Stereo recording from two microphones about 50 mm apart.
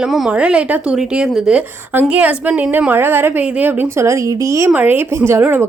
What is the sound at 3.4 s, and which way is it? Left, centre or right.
Speech, right.